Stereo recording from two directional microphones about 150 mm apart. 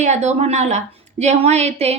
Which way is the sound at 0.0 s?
50° right (ahead or behind).